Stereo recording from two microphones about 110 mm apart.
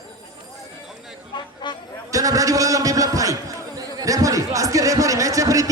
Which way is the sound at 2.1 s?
30° right (ahead or behind).